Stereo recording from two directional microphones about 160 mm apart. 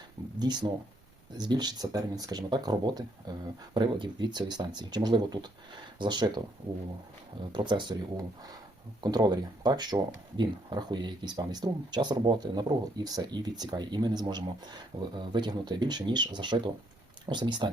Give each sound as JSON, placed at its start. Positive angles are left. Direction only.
{"t": 0.3, "sound": "speech", "side_deg": -25}
{"t": 7.5, "sound": "speech", "side_deg": -30}